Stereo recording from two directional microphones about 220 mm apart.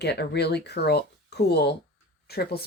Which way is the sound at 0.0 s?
50° left (ahead or behind).